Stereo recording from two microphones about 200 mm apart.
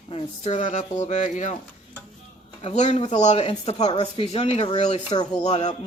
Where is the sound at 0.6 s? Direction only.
35° left (ahead or behind).